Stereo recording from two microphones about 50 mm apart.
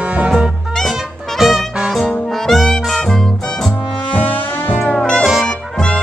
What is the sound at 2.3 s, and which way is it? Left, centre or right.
Music, centre.